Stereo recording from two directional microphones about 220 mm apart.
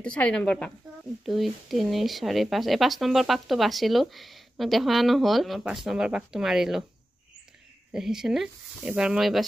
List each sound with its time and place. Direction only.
0.0 s speech: 5° left (ahead or behind)
7.9 s speech: centre (ahead or behind)